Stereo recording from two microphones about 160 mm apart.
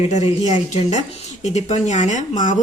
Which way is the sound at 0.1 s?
45° left (ahead or behind).